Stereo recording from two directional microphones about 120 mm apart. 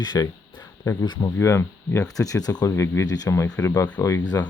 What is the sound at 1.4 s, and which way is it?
Speech, 25° left (ahead or behind).